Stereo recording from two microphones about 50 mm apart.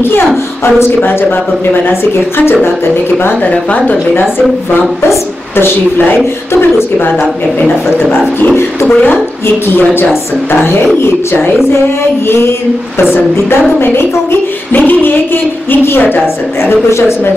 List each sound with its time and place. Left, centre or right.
1.0 s a woman's voice: left
7.6 s a woman's voice: left
10.5 s music: left
13.1 s music: left
14.7 s a woman's voice: left
15.7 s music: left
16.0 s a woman's voice: left